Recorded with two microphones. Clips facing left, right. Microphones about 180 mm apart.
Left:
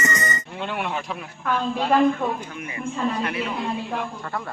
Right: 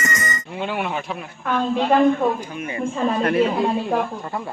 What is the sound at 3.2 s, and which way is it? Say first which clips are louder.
Speech: right 8 dB; 50° right (ahead or behind).